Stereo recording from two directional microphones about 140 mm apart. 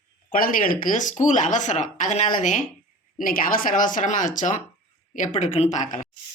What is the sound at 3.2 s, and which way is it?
Speech, 90° left.